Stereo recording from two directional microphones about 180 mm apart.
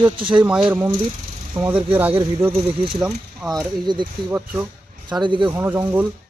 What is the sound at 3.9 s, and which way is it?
Speech, 25° right (ahead or behind).